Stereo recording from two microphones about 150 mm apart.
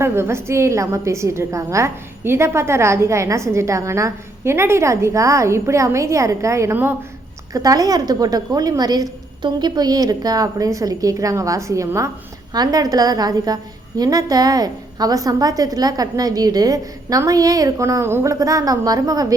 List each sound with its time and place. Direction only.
0.0 s a woman's voice: 15° right (ahead or behind)